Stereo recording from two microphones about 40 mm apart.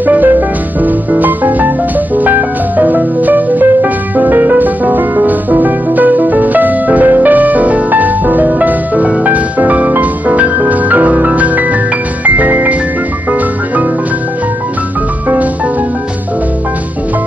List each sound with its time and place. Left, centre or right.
0.0 s music: right